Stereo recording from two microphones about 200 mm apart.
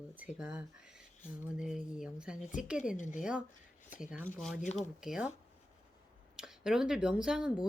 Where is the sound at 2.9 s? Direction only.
40° left (ahead or behind).